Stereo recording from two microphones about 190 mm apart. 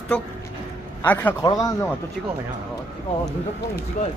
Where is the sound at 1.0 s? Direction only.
10° left (ahead or behind).